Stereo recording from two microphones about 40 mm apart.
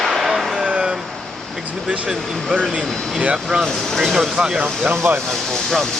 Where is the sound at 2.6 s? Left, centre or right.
Right.